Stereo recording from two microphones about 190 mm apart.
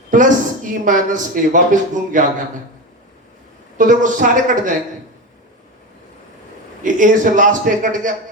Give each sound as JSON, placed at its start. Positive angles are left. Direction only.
{"t": 0.1, "sound": "a woman's voice", "side_deg": -45}
{"t": 3.8, "sound": "a woman's voice", "side_deg": -45}
{"t": 6.8, "sound": "a woman's voice", "side_deg": -40}